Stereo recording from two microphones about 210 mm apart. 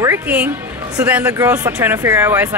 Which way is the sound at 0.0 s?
10° right (ahead or behind).